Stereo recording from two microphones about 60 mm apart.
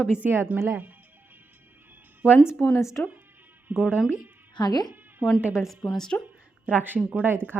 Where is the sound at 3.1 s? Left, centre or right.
Right.